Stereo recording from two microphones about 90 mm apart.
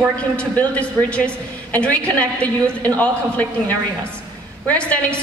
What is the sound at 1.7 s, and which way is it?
Speech, 15° left (ahead or behind).